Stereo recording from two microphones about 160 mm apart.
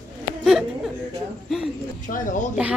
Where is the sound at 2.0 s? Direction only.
55° left (ahead or behind).